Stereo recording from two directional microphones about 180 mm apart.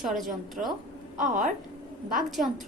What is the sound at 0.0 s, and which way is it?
Speech, centre (ahead or behind).